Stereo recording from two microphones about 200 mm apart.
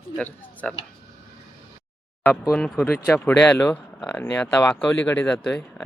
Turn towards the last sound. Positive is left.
turn(degrees=5)  # may be behind; listen again after turning